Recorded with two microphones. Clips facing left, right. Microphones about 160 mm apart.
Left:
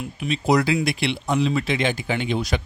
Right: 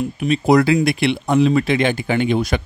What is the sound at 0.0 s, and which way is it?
Speech, 50° right (ahead or behind).